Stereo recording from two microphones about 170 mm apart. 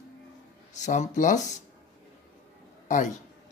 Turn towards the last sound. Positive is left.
turn(degrees=45)  # may be behind; listen again after turning